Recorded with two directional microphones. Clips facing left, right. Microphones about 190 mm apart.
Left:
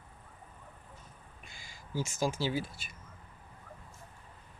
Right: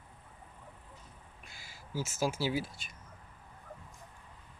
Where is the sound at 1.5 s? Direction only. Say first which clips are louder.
Even; 5° right (ahead or behind).